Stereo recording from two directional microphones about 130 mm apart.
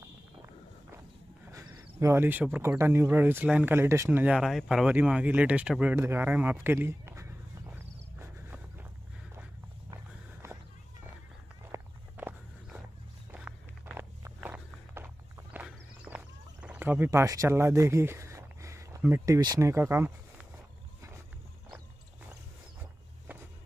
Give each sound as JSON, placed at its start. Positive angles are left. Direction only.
{"t": 1.5, "sound": "speech", "side_deg": -25}
{"t": 4.4, "sound": "a sound", "side_deg": 0}
{"t": 11.7, "sound": "walk", "side_deg": -15}
{"t": 16.1, "sound": "horse", "side_deg": -15}
{"t": 16.6, "sound": "speech", "side_deg": -10}